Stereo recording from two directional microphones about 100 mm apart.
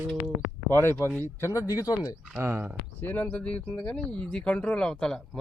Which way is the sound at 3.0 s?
15° left (ahead or behind).